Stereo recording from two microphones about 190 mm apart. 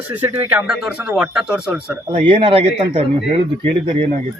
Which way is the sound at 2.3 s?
25° right (ahead or behind).